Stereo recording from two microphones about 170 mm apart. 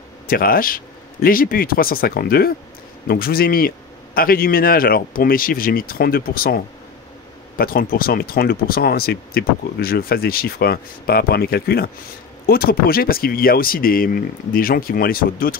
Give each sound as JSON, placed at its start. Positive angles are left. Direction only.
{"t": 0.3, "sound": "speech", "side_deg": 60}